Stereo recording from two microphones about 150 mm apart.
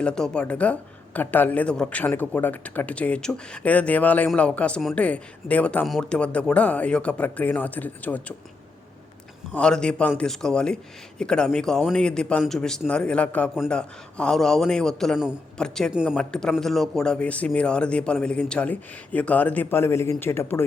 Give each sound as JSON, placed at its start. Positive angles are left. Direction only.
{"t": 0.0, "sound": "a man's voice", "side_deg": 5}
{"t": 9.5, "sound": "a man's voice", "side_deg": 5}